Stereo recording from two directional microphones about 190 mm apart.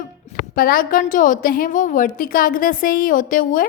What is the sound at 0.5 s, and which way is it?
A woman's voice, 50° left (ahead or behind).